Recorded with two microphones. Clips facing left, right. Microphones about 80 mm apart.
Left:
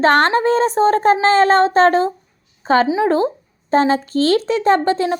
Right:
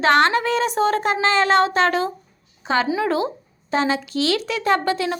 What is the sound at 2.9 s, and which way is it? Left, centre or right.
Speech, left.